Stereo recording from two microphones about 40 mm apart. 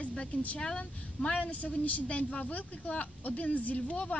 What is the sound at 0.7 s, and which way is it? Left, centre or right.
A woman's voice, left.